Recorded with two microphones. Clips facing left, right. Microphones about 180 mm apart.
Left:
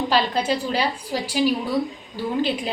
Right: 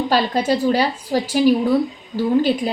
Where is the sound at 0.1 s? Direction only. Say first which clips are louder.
Right 4 dB; 45° right (ahead or behind).